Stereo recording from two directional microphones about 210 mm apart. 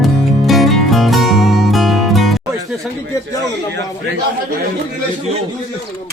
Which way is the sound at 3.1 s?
15° left (ahead or behind).